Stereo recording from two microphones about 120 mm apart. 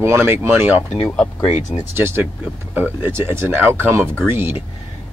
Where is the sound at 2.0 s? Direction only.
20° right (ahead or behind).